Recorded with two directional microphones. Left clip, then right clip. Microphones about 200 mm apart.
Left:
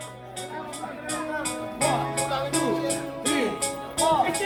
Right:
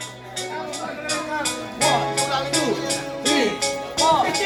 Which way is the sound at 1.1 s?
55° left (ahead or behind).